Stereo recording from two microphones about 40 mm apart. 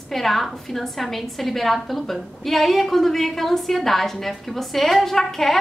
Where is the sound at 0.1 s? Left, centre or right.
Centre.